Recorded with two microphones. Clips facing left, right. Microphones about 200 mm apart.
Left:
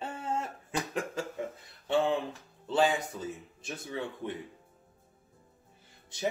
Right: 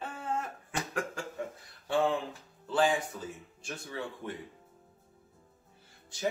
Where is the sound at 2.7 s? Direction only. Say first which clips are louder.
Left 1 dB; 20° left (ahead or behind).